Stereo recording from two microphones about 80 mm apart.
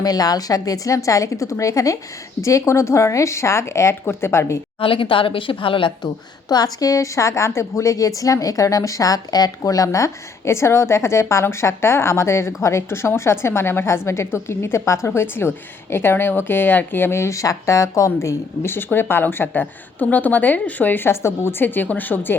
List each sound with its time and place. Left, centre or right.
0.0 s a woman's voice: left
4.8 s speech: left
6.5 s a woman's voice: left